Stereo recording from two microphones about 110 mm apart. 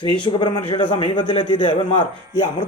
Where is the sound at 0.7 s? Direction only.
55° left (ahead or behind).